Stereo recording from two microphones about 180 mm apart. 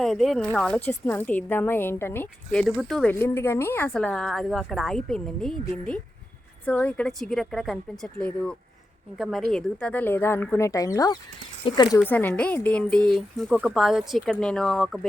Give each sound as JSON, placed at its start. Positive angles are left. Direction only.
{"t": 0.0, "sound": "a woman's voice", "side_deg": 0}
{"t": 12.0, "sound": "a woman's voice", "side_deg": 10}